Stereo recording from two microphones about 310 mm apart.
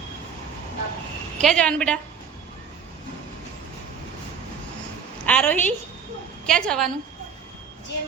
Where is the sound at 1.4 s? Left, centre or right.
Centre.